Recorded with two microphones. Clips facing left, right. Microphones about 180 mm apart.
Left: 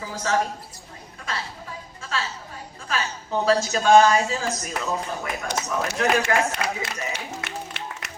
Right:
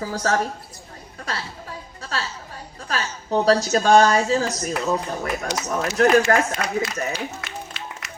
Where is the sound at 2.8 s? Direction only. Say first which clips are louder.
Right 2 dB; 40° right (ahead or behind).